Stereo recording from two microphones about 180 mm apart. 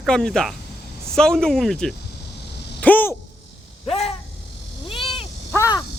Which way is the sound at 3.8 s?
35° left (ahead or behind).